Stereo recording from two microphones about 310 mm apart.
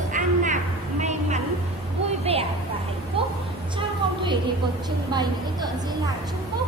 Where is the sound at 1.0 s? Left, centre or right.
Right.